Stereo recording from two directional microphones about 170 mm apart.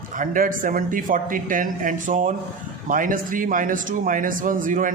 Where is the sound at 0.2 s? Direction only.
55° right (ahead or behind).